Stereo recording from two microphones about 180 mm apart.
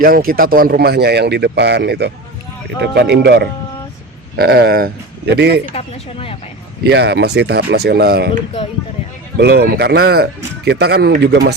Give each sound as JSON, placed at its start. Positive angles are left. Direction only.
{"t": 0.0, "sound": "a man's voice", "side_deg": -55}
{"t": 5.7, "sound": "speech", "side_deg": 30}
{"t": 6.8, "sound": "a man's voice", "side_deg": -65}
{"t": 9.4, "sound": "a man's voice", "side_deg": -60}